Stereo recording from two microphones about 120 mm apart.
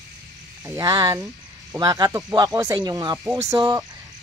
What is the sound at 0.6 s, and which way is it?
Speech, 25° right (ahead or behind).